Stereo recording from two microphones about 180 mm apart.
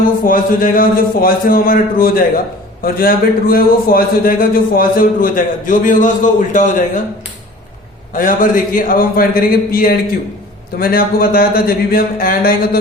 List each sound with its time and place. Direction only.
0.3 s a man's voice: 50° left (ahead or behind)
8.1 s a man's voice: 50° left (ahead or behind)